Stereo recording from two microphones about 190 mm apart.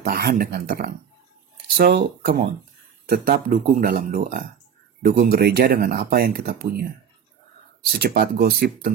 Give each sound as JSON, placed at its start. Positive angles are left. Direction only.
{"t": 0.0, "sound": "speech", "side_deg": -50}
{"t": 8.0, "sound": "speech", "side_deg": -55}